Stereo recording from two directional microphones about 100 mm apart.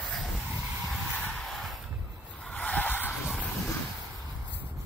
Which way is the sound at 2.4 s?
15° left (ahead or behind).